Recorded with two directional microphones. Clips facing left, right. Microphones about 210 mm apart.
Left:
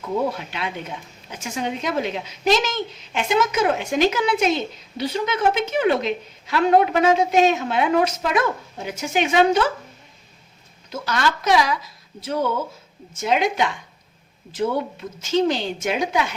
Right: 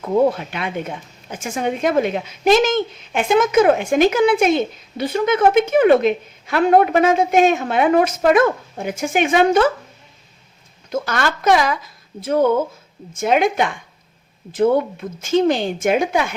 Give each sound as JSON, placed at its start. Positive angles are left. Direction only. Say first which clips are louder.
{"t": 0.3, "sound": "a woman's voice", "louder": "right 6 dB", "side_deg": -50}
{"t": 10.8, "sound": "a woman's voice", "louder": "right 2 dB", "side_deg": -50}